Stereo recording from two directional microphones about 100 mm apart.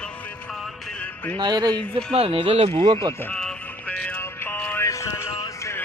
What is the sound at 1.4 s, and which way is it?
Speech, 45° right (ahead or behind).